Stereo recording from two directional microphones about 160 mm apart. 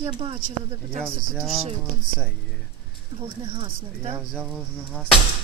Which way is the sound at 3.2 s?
35° right (ahead or behind).